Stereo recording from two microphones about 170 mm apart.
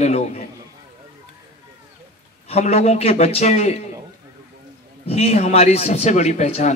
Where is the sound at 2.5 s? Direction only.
35° left (ahead or behind).